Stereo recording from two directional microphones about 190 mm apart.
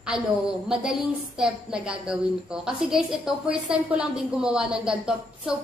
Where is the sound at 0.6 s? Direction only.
5° right (ahead or behind).